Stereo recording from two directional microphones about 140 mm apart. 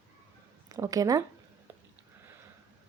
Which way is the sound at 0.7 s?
25° right (ahead or behind).